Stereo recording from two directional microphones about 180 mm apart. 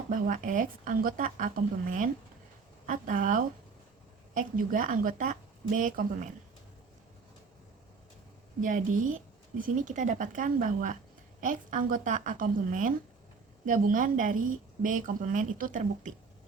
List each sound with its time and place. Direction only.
0.1 s speech: 45° right (ahead or behind)
2.8 s speech: 45° right (ahead or behind)
8.6 s speech: 45° right (ahead or behind)